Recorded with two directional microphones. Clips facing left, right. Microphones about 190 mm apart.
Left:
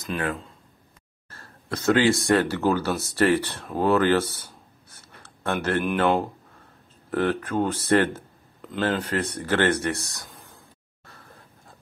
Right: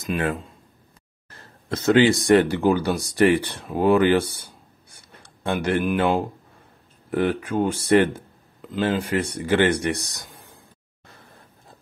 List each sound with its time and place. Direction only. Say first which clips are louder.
0.0 s speech: right 3 dB; 25° right (ahead or behind)
1.3 s a sound: right 3 dB; 20° right (ahead or behind)
2.2 s speech: right 4 dB; 15° right (ahead or behind)